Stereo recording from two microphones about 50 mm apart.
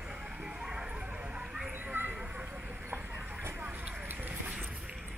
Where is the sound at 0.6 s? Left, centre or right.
Centre.